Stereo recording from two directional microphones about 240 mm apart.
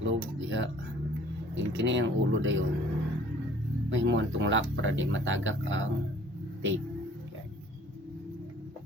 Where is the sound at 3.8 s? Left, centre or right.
Right.